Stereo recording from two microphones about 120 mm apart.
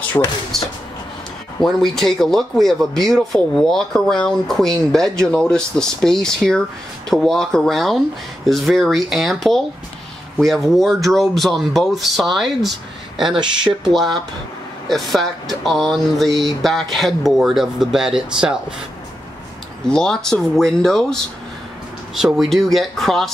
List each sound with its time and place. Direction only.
0.2 s speech: 25° left (ahead or behind)
0.5 s speech: centre (ahead or behind)
13.3 s speech: 40° right (ahead or behind)
13.8 s speech: centre (ahead or behind)
19.9 s speech: 5° left (ahead or behind)